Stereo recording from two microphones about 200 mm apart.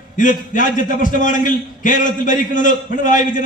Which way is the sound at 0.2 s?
40° left (ahead or behind).